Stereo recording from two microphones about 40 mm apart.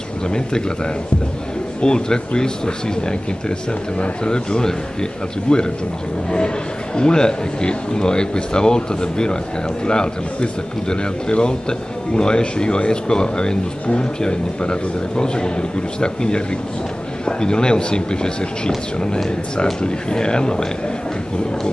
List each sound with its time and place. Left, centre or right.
0.3 s speech: centre
1.8 s speech: left
7.0 s speech: left
19.5 s speech: left